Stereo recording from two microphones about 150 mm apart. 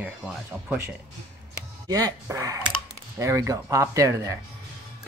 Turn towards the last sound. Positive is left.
turn(degrees=-20)  # may be behind; listen again after turning